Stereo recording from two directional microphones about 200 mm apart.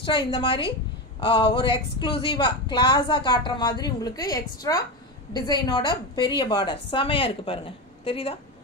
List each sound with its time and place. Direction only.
0.3 s a woman's voice: 25° left (ahead or behind)